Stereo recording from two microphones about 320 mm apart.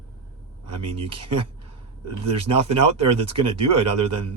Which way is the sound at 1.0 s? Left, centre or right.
Centre.